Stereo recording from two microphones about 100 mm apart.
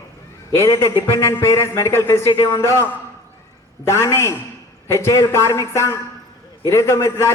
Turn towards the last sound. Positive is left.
turn(degrees=25)  # may be behind; listen again after turning